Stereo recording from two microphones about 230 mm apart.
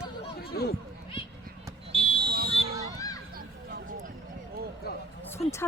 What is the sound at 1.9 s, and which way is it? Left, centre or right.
Fire alarm, left.